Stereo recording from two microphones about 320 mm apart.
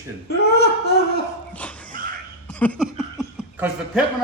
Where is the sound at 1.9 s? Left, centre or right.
Right.